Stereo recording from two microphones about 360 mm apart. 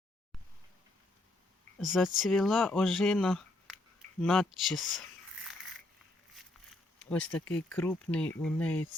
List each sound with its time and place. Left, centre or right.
1.8 s speech: centre
7.1 s speech: centre